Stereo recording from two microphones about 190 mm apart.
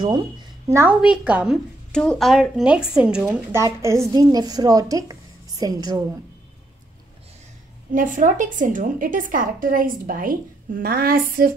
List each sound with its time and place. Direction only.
0.0 s a woman's voice: 20° right (ahead or behind)
7.9 s a woman's voice: 45° right (ahead or behind)